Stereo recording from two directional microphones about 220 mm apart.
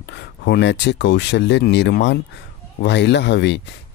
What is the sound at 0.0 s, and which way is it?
Speech, 50° left (ahead or behind).